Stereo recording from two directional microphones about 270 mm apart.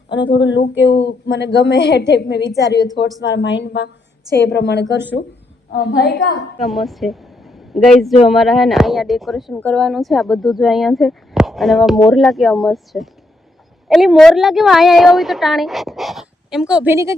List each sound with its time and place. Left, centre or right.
0.1 s a woman's voice: left
6.6 s speech: centre